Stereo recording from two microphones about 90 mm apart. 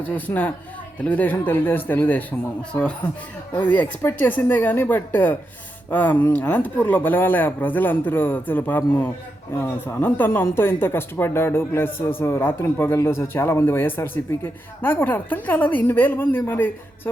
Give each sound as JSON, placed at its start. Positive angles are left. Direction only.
{"t": 0.0, "sound": "a man's voice", "side_deg": 20}
{"t": 3.5, "sound": "a man's voice", "side_deg": 20}